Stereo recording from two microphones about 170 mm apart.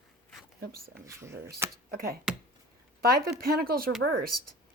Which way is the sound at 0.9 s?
15° right (ahead or behind).